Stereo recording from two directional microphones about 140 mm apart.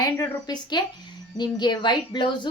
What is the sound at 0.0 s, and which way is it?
A woman's voice, 25° left (ahead or behind).